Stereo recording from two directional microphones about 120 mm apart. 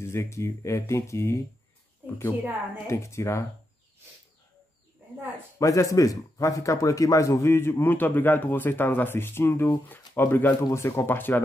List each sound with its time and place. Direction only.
0.0 s speech: 20° left (ahead or behind)
2.0 s a sound: 15° right (ahead or behind)
2.9 s speech: 25° left (ahead or behind)
5.6 s speech: 25° left (ahead or behind)